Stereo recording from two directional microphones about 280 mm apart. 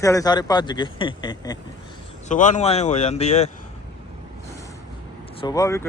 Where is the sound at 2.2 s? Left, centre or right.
Left.